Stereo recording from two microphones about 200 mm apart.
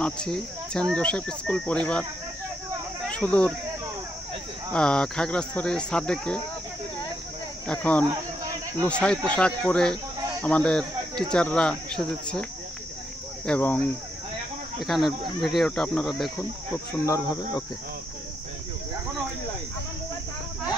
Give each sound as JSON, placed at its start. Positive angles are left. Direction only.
{"t": 0.0, "sound": "speech", "side_deg": 5}
{"t": 3.1, "sound": "speech", "side_deg": 5}
{"t": 4.7, "sound": "speech", "side_deg": 5}
{"t": 7.6, "sound": "speech", "side_deg": 5}
{"t": 13.5, "sound": "cricket", "side_deg": 10}
{"t": 14.8, "sound": "speech", "side_deg": 0}
{"t": 16.7, "sound": "cricket", "side_deg": 15}